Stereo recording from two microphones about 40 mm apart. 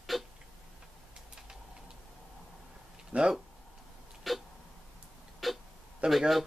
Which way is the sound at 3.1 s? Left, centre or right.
Right.